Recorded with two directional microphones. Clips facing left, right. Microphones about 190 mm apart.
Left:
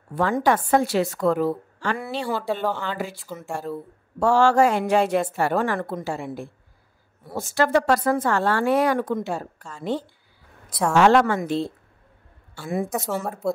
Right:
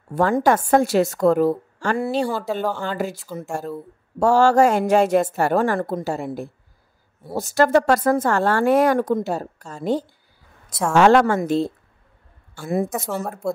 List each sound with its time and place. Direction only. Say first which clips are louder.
0.1 s a woman's voice: right 3 dB; 45° right (ahead or behind)
2.3 s speech: right 1 dB; 5° right (ahead or behind)
2.8 s a woman's voice: right 4 dB; 45° right (ahead or behind)
4.2 s a woman's voice: right 2 dB; 40° right (ahead or behind)
12.9 s speech: even; centre (ahead or behind)